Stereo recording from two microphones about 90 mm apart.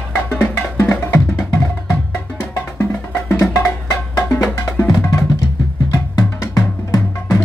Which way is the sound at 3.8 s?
35° left (ahead or behind).